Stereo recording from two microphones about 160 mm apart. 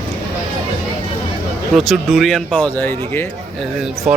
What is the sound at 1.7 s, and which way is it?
Speech, centre (ahead or behind).